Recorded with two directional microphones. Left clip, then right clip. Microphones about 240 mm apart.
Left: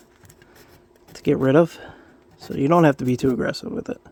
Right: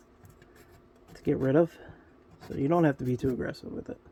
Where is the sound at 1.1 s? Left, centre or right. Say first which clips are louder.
Left 8 dB; left.